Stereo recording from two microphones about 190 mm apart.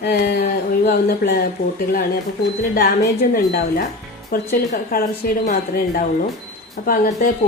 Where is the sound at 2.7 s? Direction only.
50° left (ahead or behind).